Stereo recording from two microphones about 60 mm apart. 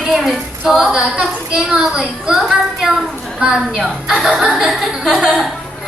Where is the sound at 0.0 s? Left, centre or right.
Centre.